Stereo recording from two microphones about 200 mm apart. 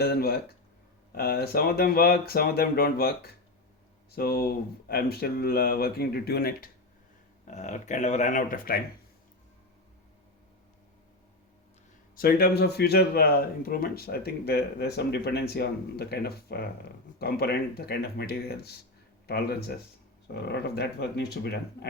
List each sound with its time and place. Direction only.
0.0 s speech: 50° left (ahead or behind)
7.4 s speech: 35° left (ahead or behind)
12.1 s speech: 45° left (ahead or behind)